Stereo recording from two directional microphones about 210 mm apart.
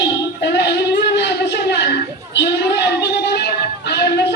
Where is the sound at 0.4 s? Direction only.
55° left (ahead or behind).